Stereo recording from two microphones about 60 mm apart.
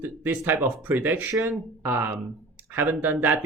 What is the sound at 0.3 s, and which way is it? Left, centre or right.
Speech, right.